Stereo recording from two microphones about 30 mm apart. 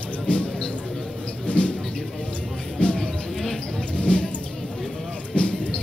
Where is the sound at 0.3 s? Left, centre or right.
Left.